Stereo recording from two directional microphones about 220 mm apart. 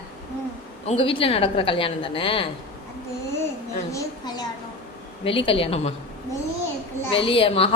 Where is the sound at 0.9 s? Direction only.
25° left (ahead or behind).